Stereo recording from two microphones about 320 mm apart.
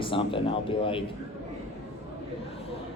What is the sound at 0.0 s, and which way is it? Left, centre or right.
Speech, centre.